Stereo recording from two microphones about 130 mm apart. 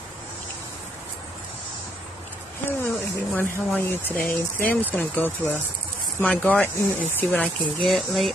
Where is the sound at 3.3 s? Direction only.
15° left (ahead or behind).